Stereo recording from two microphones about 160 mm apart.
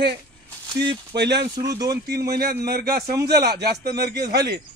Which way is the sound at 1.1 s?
90° right.